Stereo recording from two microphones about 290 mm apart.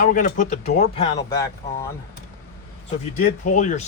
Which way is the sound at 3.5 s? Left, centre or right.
Left.